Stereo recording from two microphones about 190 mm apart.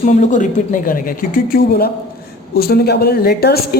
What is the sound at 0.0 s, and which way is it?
A woman's voice, 40° left (ahead or behind).